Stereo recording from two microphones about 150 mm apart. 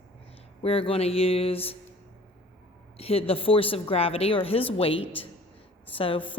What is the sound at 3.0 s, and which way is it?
Speech, 40° left (ahead or behind).